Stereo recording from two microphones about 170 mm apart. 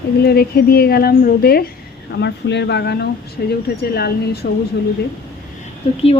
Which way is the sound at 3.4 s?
70° left (ahead or behind).